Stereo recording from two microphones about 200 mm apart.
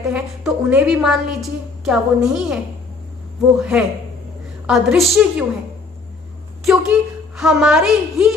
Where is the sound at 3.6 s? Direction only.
5° right (ahead or behind).